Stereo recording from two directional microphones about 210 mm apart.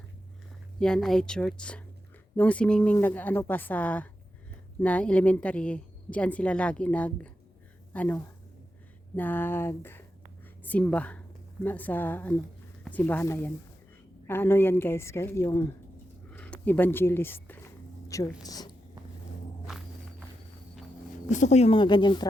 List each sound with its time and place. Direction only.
0.8 s a woman's voice: 5° left (ahead or behind)
19.6 s walk: centre (ahead or behind)
21.2 s speech: 35° left (ahead or behind)